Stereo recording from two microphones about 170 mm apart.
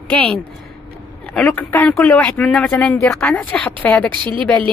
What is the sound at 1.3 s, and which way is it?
Speech, 10° left (ahead or behind).